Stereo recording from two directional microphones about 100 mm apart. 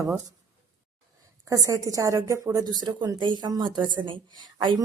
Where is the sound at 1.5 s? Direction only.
35° right (ahead or behind); by 4.8 s 50° right (ahead or behind).